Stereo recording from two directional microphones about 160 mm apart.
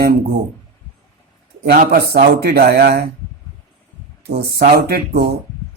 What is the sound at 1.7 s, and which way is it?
Speech, 80° right.